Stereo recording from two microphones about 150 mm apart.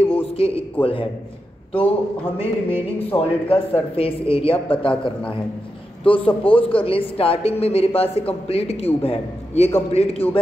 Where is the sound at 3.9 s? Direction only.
40° left (ahead or behind).